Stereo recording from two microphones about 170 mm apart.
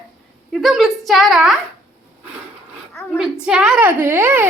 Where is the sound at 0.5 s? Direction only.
Centre (ahead or behind).